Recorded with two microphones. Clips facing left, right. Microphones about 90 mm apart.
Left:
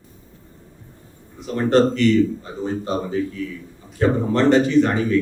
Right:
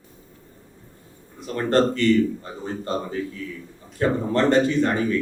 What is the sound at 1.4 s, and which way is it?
A man's voice, 20° left (ahead or behind).